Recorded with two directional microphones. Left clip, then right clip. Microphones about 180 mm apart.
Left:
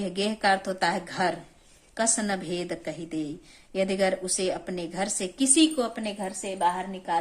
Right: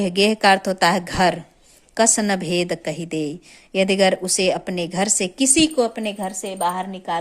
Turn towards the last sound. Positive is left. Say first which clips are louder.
# right 4 dB
turn(degrees=-45)  # may be behind; listen again after turning